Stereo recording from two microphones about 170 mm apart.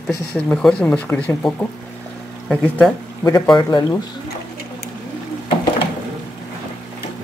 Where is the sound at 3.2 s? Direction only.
20° left (ahead or behind).